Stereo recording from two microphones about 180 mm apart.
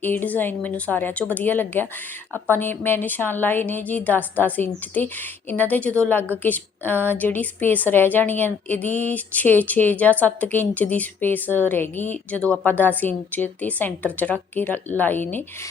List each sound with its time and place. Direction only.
0.0 s a woman's voice: 10° left (ahead or behind)